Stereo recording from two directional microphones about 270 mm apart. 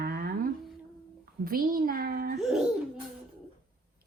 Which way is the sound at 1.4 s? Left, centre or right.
Right.